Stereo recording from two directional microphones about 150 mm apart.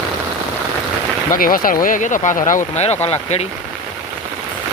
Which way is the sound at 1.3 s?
70° left (ahead or behind).